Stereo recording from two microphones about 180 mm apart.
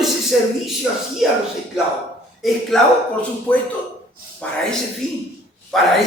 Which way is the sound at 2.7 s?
Centre (ahead or behind).